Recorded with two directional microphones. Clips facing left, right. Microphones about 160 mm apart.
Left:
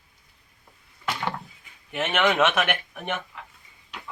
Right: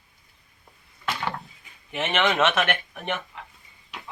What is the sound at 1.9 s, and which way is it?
Speech, centre (ahead or behind).